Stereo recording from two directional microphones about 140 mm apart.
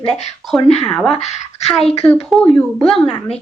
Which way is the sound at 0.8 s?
5° left (ahead or behind).